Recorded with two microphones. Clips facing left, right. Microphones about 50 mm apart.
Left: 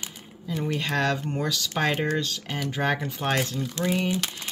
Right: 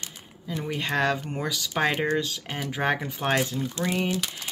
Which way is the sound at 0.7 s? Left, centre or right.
Centre.